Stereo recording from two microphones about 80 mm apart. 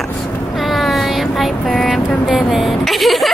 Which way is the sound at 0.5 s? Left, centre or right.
Centre.